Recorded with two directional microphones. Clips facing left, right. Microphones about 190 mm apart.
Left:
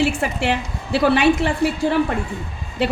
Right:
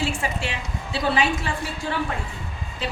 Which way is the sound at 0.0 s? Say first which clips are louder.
Left 7 dB; 65° left (ahead or behind).